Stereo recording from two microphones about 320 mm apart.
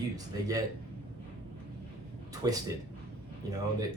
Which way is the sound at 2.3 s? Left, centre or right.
Centre.